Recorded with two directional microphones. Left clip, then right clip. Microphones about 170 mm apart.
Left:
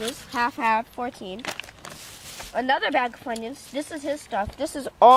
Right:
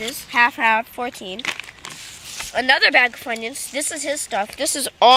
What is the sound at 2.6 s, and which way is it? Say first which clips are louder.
A woman's voice: right 8 dB; 10° right (ahead or behind).